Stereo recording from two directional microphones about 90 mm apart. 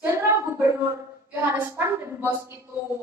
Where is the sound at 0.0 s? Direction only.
25° right (ahead or behind).